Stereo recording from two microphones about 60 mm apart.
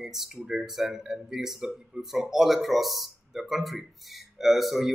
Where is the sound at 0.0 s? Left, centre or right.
Centre.